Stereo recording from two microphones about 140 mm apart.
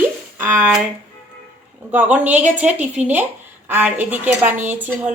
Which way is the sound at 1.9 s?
10° right (ahead or behind).